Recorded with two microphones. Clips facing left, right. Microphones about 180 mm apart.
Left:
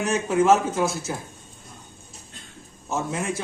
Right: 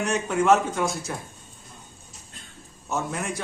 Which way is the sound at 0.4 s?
5° left (ahead or behind).